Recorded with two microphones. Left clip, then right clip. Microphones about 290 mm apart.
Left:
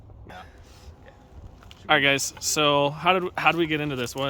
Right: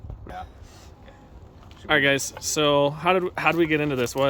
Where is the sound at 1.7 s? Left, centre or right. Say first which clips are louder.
Even; centre.